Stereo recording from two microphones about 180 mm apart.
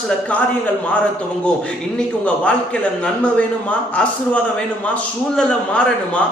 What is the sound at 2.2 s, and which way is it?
A man's voice, 5° left (ahead or behind).